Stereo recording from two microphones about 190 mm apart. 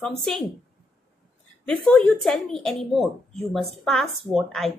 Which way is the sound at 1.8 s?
5° left (ahead or behind).